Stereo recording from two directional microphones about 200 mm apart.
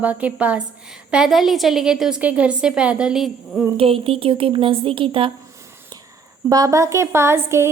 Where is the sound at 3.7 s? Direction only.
30° right (ahead or behind).